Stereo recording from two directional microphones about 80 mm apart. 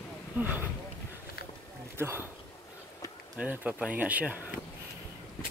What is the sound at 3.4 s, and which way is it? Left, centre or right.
Speech, centre.